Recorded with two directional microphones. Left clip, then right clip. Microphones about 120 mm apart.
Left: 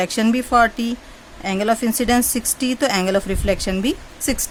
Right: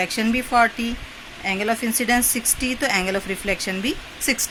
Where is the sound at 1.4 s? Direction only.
90° left.